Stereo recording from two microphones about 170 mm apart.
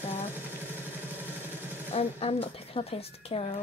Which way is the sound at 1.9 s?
35° left (ahead or behind).